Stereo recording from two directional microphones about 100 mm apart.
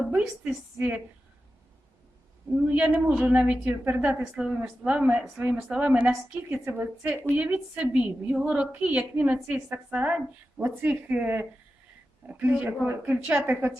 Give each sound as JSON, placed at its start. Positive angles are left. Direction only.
{"t": 0.0, "sound": "a woman's voice", "side_deg": -20}
{"t": 2.6, "sound": "a woman's voice", "side_deg": -15}